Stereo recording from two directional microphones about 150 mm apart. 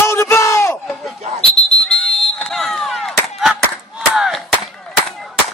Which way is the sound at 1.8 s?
5° left (ahead or behind).